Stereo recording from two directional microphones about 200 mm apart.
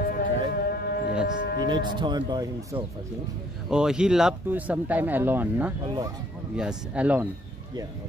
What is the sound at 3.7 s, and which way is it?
Speech, 5° right (ahead or behind).